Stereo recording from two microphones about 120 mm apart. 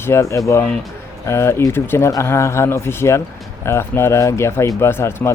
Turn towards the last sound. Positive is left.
turn(degrees=20)  # may be behind; listen again after turning